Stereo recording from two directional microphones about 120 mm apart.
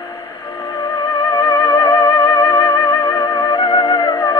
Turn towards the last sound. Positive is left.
turn(degrees=40)  # may be behind; listen again after turning